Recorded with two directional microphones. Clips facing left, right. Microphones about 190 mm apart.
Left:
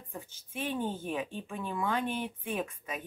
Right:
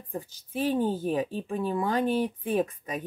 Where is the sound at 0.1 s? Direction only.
35° right (ahead or behind).